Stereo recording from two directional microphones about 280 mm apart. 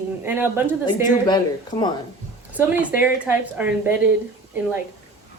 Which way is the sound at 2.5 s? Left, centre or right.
Centre.